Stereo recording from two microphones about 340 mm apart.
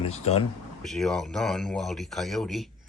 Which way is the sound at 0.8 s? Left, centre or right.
Centre.